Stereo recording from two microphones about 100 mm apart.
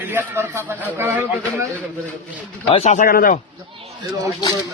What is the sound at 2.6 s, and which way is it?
Speech, 90° left.